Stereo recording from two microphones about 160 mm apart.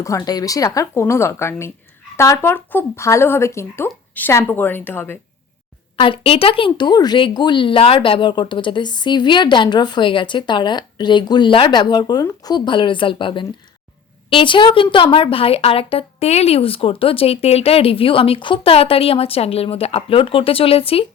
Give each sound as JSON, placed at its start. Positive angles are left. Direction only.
{"t": 0.0, "sound": "speech", "side_deg": 20}
{"t": 6.0, "sound": "a woman's voice", "side_deg": 35}